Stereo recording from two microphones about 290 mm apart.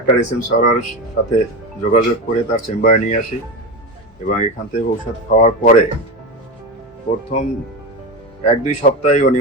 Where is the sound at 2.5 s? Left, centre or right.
Left.